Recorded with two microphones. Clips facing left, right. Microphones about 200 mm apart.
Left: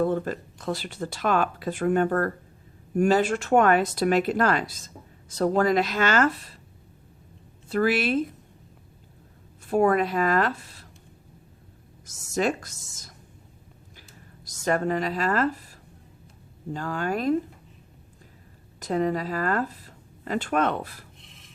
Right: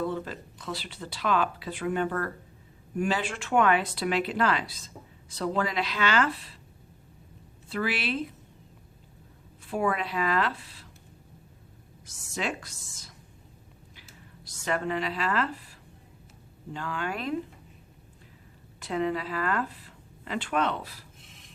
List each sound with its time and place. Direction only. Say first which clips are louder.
0.0 s speech: left 7 dB; 50° left (ahead or behind)
7.7 s speech: left 7 dB; 45° left (ahead or behind)
9.6 s speech: left 7 dB; 45° left (ahead or behind)
12.0 s speech: left 8 dB; 45° left (ahead or behind)
14.4 s a woman's voice: left 5 dB; 45° left (ahead or behind)
16.7 s speech: left 5 dB; 40° left (ahead or behind)
18.8 s speech: left 4 dB; 40° left (ahead or behind)
21.2 s a sound: left 1 dB; centre (ahead or behind)